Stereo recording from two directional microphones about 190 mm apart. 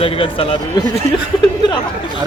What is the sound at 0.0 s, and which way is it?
Speech, 30° left (ahead or behind).